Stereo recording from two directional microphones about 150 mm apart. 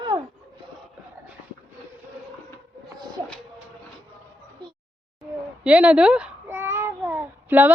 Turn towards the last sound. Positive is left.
turn(degrees=-10)  # may be behind; listen again after turning